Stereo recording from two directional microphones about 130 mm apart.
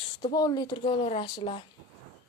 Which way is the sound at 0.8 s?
45° left (ahead or behind).